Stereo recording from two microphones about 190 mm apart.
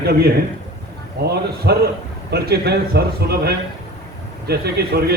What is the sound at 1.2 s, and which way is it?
A man's voice, 55° right (ahead or behind).